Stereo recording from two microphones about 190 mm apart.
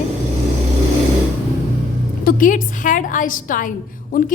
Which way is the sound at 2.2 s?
45° left (ahead or behind).